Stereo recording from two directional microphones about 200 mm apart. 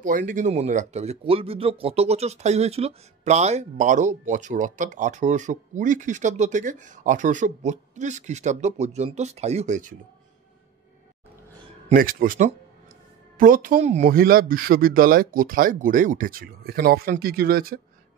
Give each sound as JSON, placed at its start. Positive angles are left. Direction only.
{"t": 0.0, "sound": "speech", "side_deg": -40}
{"t": 11.9, "sound": "speech", "side_deg": -45}